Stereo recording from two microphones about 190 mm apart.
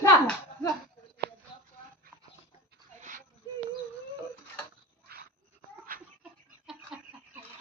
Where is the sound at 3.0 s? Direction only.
40° right (ahead or behind).